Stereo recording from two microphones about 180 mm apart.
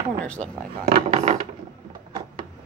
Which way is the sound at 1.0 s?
35° right (ahead or behind).